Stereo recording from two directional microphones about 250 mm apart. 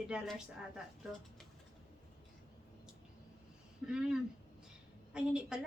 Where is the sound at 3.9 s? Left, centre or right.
Centre.